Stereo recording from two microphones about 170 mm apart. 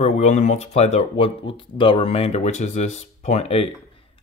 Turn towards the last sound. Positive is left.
turn(degrees=35)  # may be behind; listen again after turning